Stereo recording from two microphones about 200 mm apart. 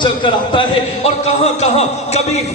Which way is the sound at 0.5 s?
30° left (ahead or behind).